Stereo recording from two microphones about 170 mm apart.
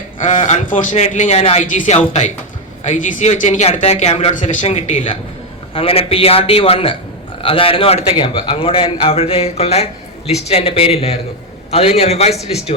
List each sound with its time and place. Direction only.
0.2 s a man's voice: 45° left (ahead or behind)
12.3 s speech: centre (ahead or behind)